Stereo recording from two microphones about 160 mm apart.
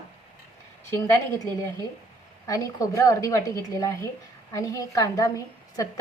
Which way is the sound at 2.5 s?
20° left (ahead or behind).